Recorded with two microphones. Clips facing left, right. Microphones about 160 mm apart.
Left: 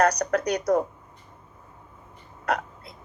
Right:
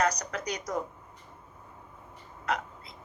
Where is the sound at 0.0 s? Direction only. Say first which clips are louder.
Left 7 dB; 65° left (ahead or behind).